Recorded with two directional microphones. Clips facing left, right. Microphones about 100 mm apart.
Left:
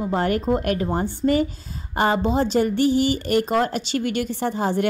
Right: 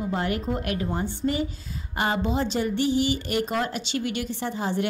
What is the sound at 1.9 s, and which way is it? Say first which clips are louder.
Speech: left 5 dB; 35° left (ahead or behind).